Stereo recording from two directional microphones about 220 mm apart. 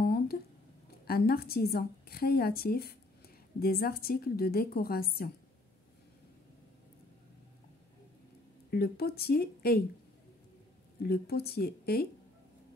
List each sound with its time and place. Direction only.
0.0 s a sound: 45° left (ahead or behind)
1.0 s a woman's voice: 45° left (ahead or behind)
8.6 s a woman's voice: 45° left (ahead or behind)
11.0 s a woman's voice: 45° left (ahead or behind)